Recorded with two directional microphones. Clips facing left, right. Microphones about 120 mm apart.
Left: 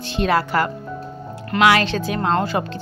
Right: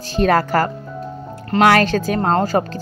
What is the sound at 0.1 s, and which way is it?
Speech, 45° right (ahead or behind).